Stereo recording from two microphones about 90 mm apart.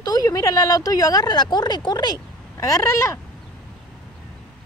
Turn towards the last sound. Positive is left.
turn(degrees=30)  # may be behind; listen again after turning